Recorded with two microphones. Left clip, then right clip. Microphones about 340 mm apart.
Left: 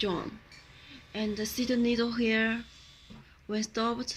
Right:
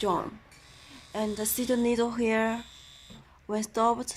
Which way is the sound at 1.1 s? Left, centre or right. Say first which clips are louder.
Right 3 dB; centre.